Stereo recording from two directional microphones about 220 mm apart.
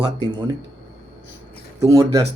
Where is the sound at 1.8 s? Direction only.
15° right (ahead or behind).